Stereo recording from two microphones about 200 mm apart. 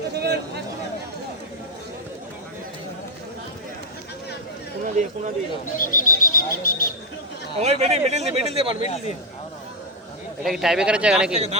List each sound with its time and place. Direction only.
0.1 s a sound: 55° right (ahead or behind)
4.8 s speech: 40° right (ahead or behind)
5.7 s speech: 45° left (ahead or behind)
7.6 s speech: 35° right (ahead or behind)
8.8 s a man's voice: 35° left (ahead or behind)
10.4 s speech: centre (ahead or behind)